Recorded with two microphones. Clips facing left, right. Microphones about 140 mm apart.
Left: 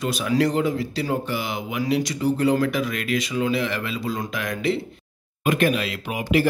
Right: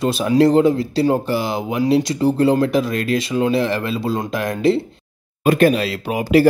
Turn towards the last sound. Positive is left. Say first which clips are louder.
# right 7 dB
turn(degrees=-35)  # may be behind; listen again after turning